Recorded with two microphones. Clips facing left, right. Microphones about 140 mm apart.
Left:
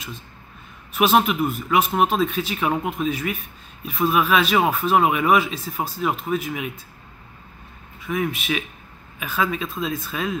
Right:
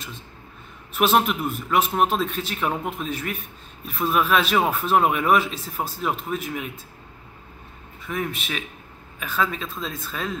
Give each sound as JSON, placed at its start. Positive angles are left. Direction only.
{"t": 0.9, "sound": "speech", "side_deg": 0}
{"t": 8.1, "sound": "speech", "side_deg": 5}